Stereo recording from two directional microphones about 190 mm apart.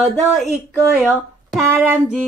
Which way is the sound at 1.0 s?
Centre (ahead or behind).